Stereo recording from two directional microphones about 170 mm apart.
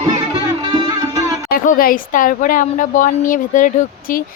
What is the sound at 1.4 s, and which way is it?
A woman's voice, 55° left (ahead or behind).